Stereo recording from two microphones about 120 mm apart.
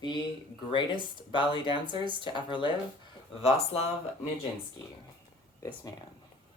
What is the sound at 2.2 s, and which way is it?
Speech, 40° left (ahead or behind).